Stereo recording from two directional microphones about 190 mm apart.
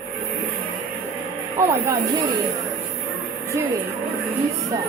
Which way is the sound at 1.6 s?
15° right (ahead or behind).